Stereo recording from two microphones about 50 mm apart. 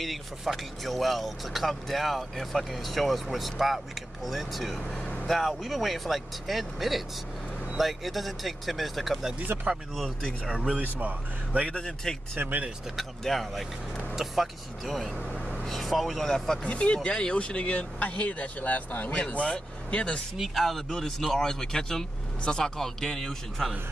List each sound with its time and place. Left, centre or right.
0.0 s speech: centre
9.5 s speech: right
10.4 s speech: centre
10.8 s speech: right
11.6 s speech: centre
12.4 s speech: right
13.2 s speech: centre
16.6 s speech: left
19.1 s speech: left
20.3 s speech: centre
22.8 s speech: centre